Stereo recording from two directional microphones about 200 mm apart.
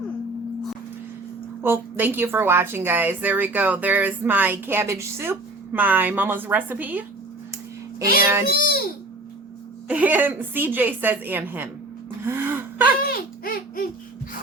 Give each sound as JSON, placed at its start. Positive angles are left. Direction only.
{"t": 1.6, "sound": "a woman's voice", "side_deg": -10}
{"t": 8.2, "sound": "a woman's voice", "side_deg": -10}
{"t": 8.4, "sound": "a child's voice", "side_deg": 45}
{"t": 9.9, "sound": "a woman's voice", "side_deg": -10}
{"t": 12.2, "sound": "gasp", "side_deg": -10}
{"t": 13.0, "sound": "a sound", "side_deg": 50}